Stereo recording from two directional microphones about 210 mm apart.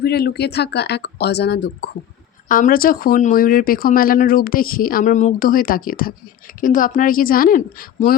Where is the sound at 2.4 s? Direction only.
40° left (ahead or behind).